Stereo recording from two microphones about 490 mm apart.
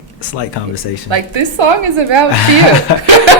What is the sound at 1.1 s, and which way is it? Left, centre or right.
A woman's voice, right.